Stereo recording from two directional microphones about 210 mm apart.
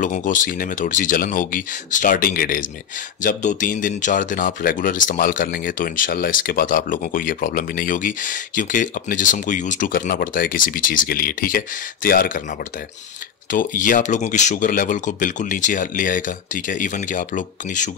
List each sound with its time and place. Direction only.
0.0 s speech: 40° left (ahead or behind)
13.5 s speech: 40° left (ahead or behind)